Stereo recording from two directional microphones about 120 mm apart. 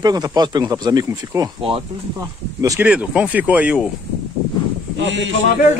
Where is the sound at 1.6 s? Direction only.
50° right (ahead or behind).